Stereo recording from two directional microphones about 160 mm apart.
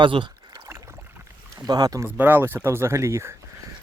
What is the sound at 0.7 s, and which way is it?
Boat, 20° right (ahead or behind).